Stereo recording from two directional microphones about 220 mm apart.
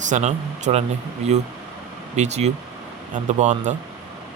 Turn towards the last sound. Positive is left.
turn(degrees=-35)  # may be behind; listen again after turning